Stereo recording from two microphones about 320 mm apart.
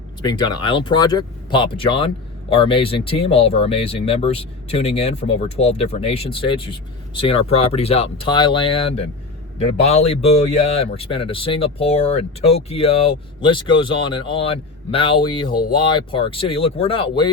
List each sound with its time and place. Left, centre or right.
0.2 s speech: centre